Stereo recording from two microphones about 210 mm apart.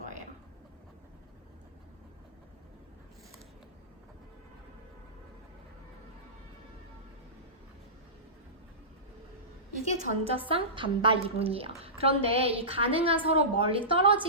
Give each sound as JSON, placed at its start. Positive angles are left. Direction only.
{"t": 9.9, "sound": "a woman's voice", "side_deg": -35}